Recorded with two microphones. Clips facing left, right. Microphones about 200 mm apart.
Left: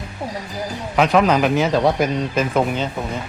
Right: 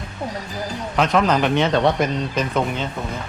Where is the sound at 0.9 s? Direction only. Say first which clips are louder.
Left 3 dB; 5° left (ahead or behind).